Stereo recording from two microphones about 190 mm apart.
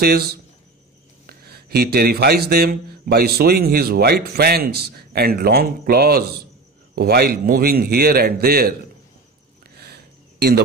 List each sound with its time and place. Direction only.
0.0 s a man's voice: 55° right (ahead or behind)